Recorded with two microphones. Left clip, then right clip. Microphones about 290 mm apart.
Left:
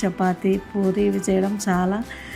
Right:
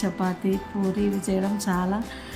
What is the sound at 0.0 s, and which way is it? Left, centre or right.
A woman's voice, centre.